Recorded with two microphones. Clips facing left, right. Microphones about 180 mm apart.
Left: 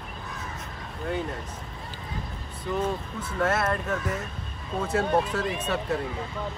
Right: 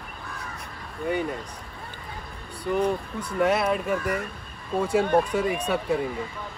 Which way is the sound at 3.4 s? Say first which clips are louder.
Right 3 dB; 10° right (ahead or behind).